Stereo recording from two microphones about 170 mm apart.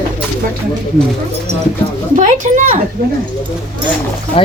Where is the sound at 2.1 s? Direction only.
45° right (ahead or behind).